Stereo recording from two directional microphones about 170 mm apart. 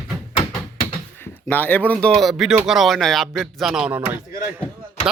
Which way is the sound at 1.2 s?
10° left (ahead or behind).